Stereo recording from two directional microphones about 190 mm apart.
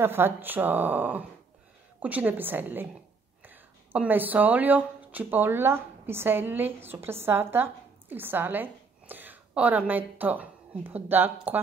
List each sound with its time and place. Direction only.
0.0 s speech: 10° right (ahead or behind)